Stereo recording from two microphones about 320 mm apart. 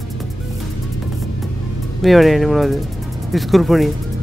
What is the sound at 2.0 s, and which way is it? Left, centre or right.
Speech, centre.